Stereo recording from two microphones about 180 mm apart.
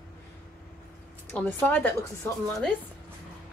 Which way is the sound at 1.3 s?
10° left (ahead or behind).